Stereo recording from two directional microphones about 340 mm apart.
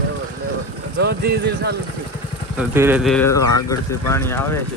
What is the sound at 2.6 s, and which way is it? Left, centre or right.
Speech, centre.